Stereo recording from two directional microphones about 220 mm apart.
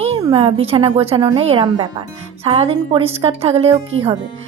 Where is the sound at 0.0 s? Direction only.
25° right (ahead or behind).